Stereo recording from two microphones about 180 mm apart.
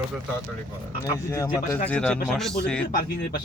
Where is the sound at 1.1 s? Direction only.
20° left (ahead or behind).